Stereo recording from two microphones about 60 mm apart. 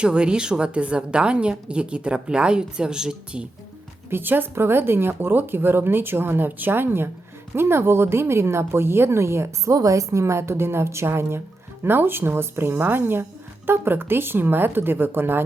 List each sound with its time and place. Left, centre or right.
0.0 s a woman's voice: centre
4.1 s a woman's voice: right
9.7 s a woman's voice: right